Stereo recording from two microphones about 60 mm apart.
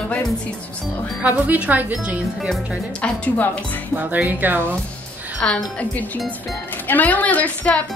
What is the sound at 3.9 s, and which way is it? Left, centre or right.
Speech, right.